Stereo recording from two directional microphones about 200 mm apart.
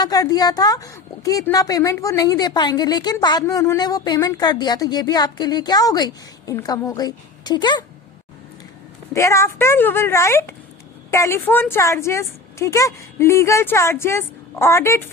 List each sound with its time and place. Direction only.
0.0 s a woman's voice: 20° left (ahead or behind)
9.1 s a woman's voice: 15° left (ahead or behind)